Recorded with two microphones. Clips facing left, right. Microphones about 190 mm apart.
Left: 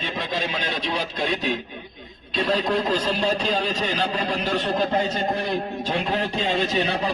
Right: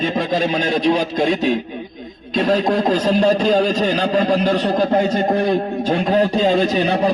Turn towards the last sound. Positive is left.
turn(degrees=-45)  # may be behind; listen again after turning